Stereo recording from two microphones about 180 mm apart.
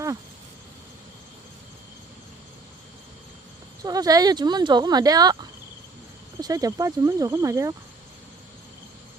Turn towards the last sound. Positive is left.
turn(degrees=-15)  # may be behind; listen again after turning